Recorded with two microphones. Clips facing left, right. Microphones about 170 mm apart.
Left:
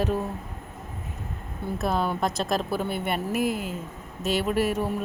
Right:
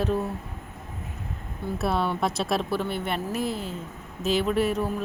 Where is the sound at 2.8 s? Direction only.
50° left (ahead or behind).